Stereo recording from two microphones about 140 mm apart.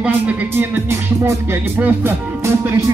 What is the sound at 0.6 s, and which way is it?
Music, 20° right (ahead or behind).